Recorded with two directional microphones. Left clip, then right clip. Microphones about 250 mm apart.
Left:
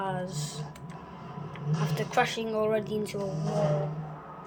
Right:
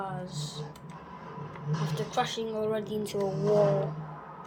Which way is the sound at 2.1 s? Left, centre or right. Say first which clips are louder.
Left 4 dB; centre.